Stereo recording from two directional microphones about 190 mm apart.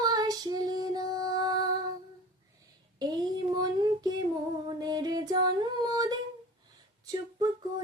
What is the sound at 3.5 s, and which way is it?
Child singing, 20° right (ahead or behind).